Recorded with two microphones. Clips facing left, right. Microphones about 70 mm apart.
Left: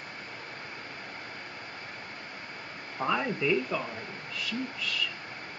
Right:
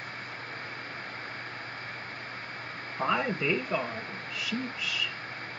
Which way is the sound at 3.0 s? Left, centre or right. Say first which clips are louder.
Even; centre.